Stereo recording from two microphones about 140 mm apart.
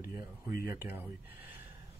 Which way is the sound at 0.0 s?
85° left.